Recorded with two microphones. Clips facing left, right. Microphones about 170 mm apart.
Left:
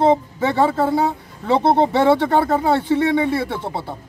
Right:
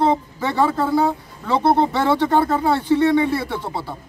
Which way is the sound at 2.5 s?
25° left (ahead or behind).